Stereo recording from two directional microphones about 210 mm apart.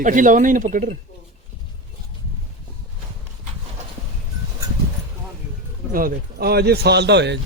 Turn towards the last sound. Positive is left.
turn(degrees=-55)  # may be behind; listen again after turning